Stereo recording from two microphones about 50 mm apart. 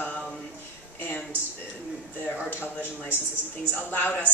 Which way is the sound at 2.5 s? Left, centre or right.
Left.